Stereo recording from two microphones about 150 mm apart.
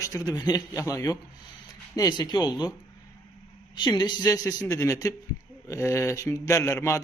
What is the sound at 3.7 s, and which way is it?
A man's voice, 30° left (ahead or behind).